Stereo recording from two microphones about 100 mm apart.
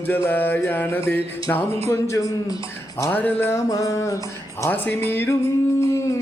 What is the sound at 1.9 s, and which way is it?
Speech, 30° left (ahead or behind).